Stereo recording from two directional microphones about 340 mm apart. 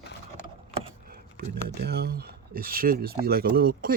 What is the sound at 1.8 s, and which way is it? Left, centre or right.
Speech, right.